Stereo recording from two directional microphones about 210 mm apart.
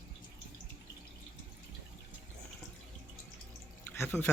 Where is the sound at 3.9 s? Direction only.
10° left (ahead or behind).